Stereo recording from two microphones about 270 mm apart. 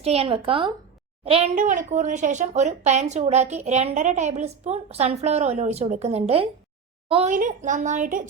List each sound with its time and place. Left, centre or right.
0.0 s speech: right